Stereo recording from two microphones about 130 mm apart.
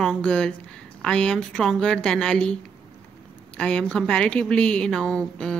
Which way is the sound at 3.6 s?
5° left (ahead or behind).